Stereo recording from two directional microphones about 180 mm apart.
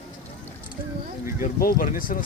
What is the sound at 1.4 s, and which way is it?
Speech, 55° left (ahead or behind).